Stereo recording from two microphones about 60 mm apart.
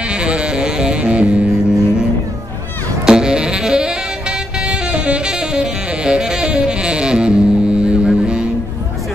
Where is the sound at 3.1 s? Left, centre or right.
Centre.